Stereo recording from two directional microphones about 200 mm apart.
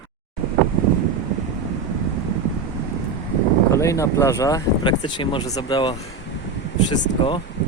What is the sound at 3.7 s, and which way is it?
Speech, 15° left (ahead or behind).